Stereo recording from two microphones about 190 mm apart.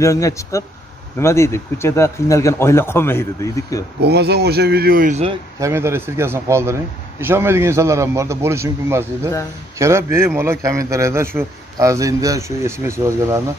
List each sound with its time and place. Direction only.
0.0 s speech: 15° left (ahead or behind)
4.0 s speech: 60° right (ahead or behind)
5.6 s a man's voice: 15° right (ahead or behind)